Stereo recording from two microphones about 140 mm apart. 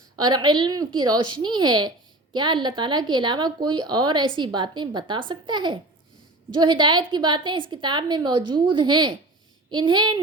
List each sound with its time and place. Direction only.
0.2 s a woman's voice: 30° right (ahead or behind)